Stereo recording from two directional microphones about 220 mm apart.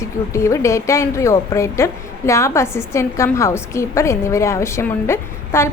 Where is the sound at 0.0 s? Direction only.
15° left (ahead or behind).